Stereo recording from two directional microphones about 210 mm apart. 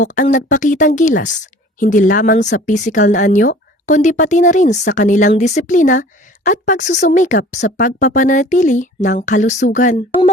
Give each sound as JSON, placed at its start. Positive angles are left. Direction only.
{"t": 0.0, "sound": "a woman's voice", "side_deg": 40}